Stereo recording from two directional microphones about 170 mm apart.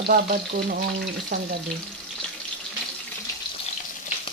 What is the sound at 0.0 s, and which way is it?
Frying, 60° right (ahead or behind).